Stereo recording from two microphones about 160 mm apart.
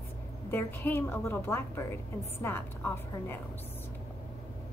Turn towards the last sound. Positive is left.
turn(degrees=15)  # may be behind; listen again after turning